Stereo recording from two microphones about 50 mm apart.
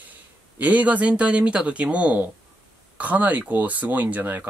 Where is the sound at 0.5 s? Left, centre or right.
Right.